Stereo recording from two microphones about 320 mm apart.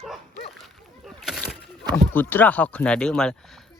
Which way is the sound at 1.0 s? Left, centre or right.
Centre.